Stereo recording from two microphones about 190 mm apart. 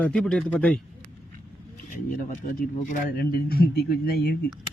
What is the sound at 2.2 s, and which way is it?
A man's voice, 45° left (ahead or behind).